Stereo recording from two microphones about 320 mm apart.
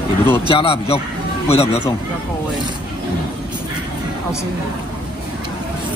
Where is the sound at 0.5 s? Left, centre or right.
Centre.